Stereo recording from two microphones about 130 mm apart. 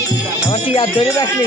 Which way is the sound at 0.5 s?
45° left (ahead or behind).